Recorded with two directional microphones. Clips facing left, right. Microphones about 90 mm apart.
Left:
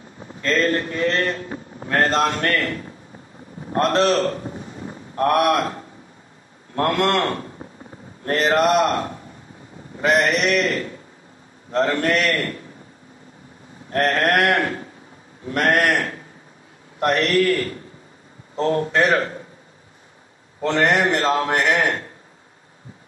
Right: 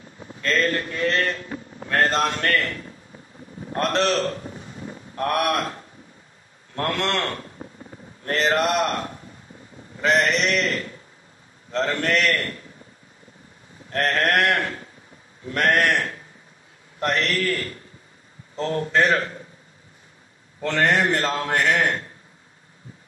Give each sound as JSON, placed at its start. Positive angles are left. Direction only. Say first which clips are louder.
{"t": 0.4, "sound": "a man's voice", "louder": "left 3 dB", "side_deg": 30}
{"t": 13.8, "sound": "a man's voice", "louder": "left 3 dB", "side_deg": 30}
{"t": 20.6, "sound": "a man's voice", "louder": "left 2 dB", "side_deg": 30}